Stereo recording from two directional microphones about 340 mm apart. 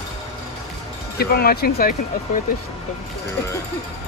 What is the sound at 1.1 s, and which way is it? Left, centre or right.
Speech, left.